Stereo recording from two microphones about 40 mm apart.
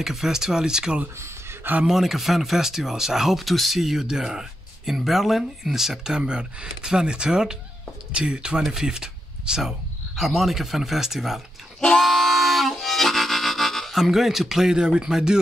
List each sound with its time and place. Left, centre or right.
0.0 s speech: centre
1.9 s speech: centre
6.1 s speech: right
8.7 s a sound: centre
9.6 s speech: centre
12.0 s music: centre
14.8 s speech: centre